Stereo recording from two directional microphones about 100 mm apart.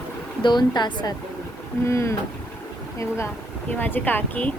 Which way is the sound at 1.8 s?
30° left (ahead or behind).